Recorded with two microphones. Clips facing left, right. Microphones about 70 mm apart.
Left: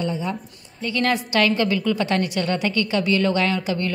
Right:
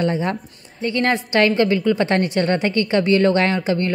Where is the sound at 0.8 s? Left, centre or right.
Right.